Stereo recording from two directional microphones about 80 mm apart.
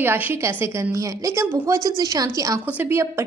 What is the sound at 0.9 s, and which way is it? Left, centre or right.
Speech, right.